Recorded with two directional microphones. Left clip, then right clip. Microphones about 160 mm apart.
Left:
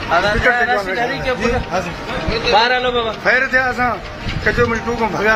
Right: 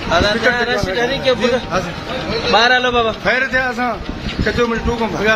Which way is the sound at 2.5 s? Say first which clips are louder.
Right 2 dB; 60° right (ahead or behind).